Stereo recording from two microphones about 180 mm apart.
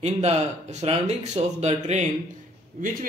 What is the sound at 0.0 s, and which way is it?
A man's voice, 35° right (ahead or behind).